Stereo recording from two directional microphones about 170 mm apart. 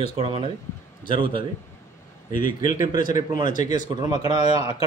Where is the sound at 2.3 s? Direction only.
55° left (ahead or behind).